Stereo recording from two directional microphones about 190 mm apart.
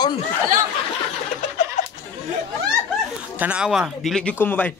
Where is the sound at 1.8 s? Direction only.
35° left (ahead or behind).